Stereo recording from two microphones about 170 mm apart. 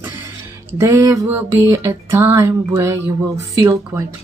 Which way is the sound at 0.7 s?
15° right (ahead or behind).